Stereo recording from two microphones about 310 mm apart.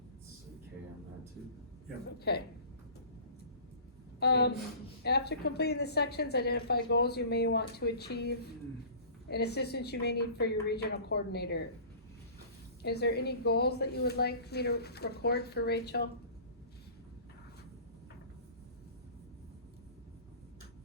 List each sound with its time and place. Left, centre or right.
2.1 s a woman's voice: left
4.2 s a woman's voice: left
12.8 s a woman's voice: left